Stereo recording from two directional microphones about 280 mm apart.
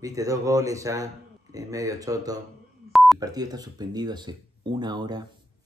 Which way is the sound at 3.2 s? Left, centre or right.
Centre.